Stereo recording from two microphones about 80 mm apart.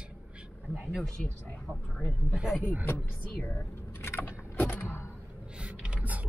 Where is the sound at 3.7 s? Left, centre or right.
Left.